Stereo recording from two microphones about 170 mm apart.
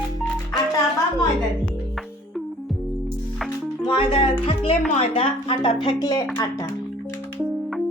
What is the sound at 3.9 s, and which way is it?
A woman's voice, 35° left (ahead or behind).